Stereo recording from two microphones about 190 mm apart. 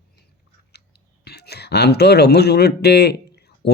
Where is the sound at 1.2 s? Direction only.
60° left (ahead or behind).